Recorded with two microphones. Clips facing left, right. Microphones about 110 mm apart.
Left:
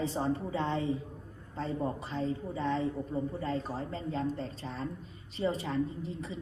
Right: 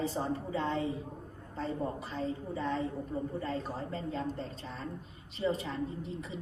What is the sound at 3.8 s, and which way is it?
Speech, 40° right (ahead or behind).